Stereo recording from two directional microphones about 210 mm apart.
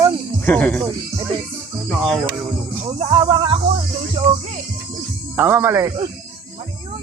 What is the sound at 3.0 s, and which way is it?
Speech, 25° right (ahead or behind).